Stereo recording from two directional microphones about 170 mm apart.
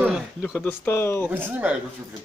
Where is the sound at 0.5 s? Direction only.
10° left (ahead or behind).